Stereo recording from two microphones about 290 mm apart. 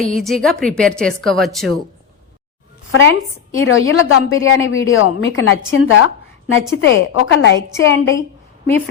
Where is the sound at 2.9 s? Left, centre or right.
Left.